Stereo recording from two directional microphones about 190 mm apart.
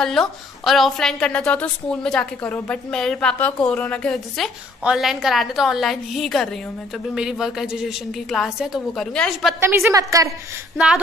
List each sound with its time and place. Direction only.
0.0 s a woman's voice: centre (ahead or behind)
9.8 s a woman's voice: 20° right (ahead or behind)